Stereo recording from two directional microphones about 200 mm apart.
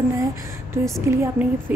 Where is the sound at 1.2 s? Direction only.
10° right (ahead or behind).